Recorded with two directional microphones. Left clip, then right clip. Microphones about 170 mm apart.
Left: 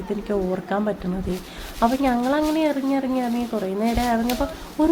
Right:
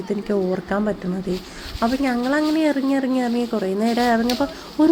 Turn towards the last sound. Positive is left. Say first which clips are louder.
# right 3 dB
turn(degrees=-20)  # may be behind; listen again after turning